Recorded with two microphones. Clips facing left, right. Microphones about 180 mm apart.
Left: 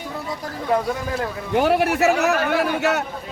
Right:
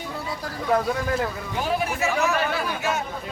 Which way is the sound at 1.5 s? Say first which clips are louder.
Left 9 dB; 70° left (ahead or behind).